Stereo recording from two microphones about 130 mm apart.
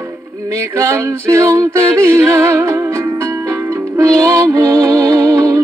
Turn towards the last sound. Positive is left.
turn(degrees=-25)  # may be behind; listen again after turning